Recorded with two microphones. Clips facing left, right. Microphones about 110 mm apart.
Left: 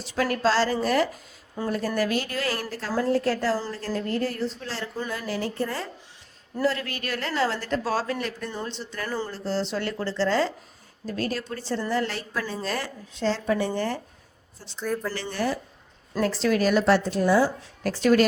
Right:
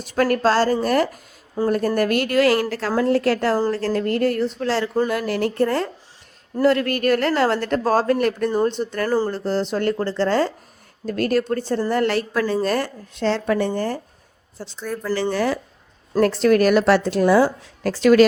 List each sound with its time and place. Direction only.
0.0 s speech: 50° right (ahead or behind)
1.6 s speech: 30° right (ahead or behind)
2.0 s a woman's voice: 60° right (ahead or behind)
3.8 s a woman's voice: 75° right (ahead or behind)
5.0 s speech: 65° right (ahead or behind); by 9.3 s 40° right (ahead or behind)
9.3 s speech: 55° right (ahead or behind)
11.9 s a woman's voice: 65° right (ahead or behind)
12.6 s speech: 50° right (ahead or behind); by 13.7 s 65° right (ahead or behind)
13.7 s speech: 40° right (ahead or behind)
14.8 s speech: centre (ahead or behind)
15.3 s speech: 90° right
16.2 s a woman's voice: 55° right (ahead or behind); by 17.5 s 80° right
17.9 s speech: 90° right